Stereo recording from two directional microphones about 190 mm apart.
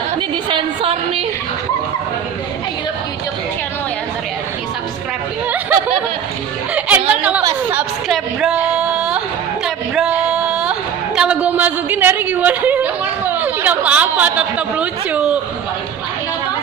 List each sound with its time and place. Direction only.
0.5 s a woman's voice: 30° right (ahead or behind)
6.7 s chatter: 5° right (ahead or behind)
7.7 s a woman's voice: 5° right (ahead or behind)
9.9 s a sound: 5° right (ahead or behind)
11.1 s a woman's voice: 5° right (ahead or behind)